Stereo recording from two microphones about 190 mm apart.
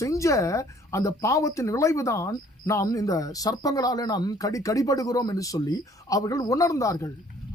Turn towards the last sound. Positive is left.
turn(degrees=15)  # may be behind; listen again after turning